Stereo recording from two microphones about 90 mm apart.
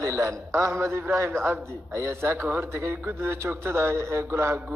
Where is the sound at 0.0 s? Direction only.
35° right (ahead or behind).